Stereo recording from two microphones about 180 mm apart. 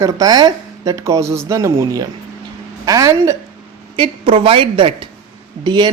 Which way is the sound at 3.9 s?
30° right (ahead or behind).